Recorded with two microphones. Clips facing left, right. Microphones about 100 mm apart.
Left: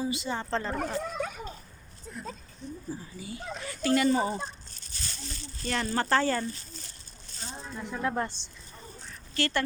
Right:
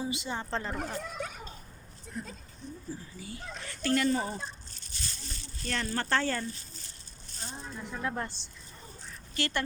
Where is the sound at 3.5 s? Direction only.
10° left (ahead or behind).